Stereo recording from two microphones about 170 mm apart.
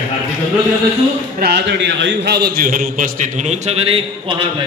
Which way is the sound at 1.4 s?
80° right.